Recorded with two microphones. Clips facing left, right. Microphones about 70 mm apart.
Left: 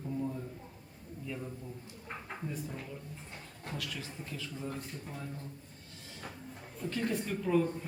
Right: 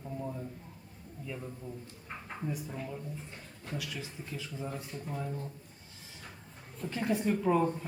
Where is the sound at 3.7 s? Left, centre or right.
Centre.